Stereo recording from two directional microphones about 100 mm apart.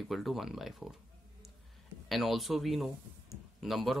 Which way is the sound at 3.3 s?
Centre (ahead or behind).